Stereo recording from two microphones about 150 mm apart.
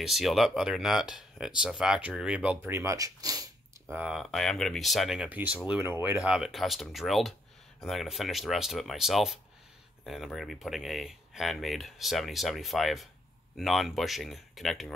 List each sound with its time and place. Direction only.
0.0 s speech: centre (ahead or behind); by 3.4 s 25° right (ahead or behind)
3.9 s speech: 5° right (ahead or behind)
6.2 s speech: 5° right (ahead or behind)